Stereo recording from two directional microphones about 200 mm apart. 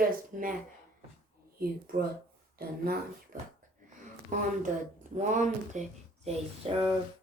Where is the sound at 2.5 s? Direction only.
50° right (ahead or behind).